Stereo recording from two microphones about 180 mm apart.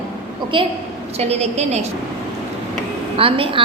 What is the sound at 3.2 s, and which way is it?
Speech, 30° right (ahead or behind).